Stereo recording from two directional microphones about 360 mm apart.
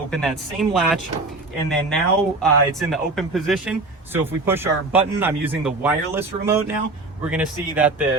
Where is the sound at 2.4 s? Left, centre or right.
Centre.